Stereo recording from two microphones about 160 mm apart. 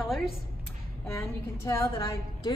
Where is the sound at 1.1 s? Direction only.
15° left (ahead or behind).